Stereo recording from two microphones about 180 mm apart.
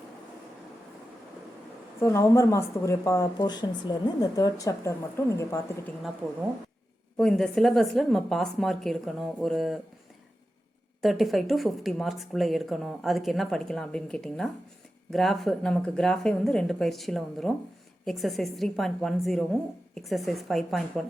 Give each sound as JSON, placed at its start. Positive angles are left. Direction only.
{"t": 2.0, "sound": "speech", "side_deg": 15}
{"t": 7.2, "sound": "a woman's voice", "side_deg": 5}
{"t": 11.0, "sound": "a woman's voice", "side_deg": 0}